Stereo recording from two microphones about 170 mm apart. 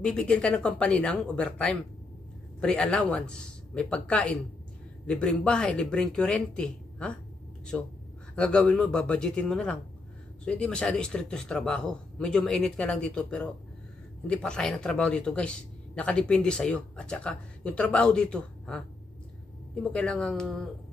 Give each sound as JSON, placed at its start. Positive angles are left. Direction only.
{"t": 0.0, "sound": "a man's voice", "side_deg": 5}
{"t": 19.8, "sound": "a man's voice", "side_deg": 5}